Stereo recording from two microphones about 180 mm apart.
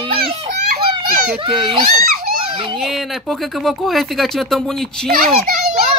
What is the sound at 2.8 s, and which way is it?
Speech, centre (ahead or behind).